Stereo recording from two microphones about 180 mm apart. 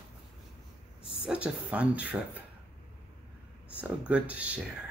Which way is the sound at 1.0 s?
30° left (ahead or behind).